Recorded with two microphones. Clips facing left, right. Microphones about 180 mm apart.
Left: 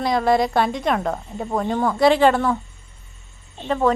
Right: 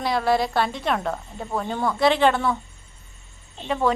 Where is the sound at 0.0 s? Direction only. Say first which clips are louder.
Left 3 dB; 5° right (ahead or behind).